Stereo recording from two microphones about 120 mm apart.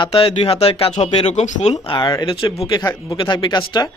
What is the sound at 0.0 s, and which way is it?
Speech, 55° left (ahead or behind).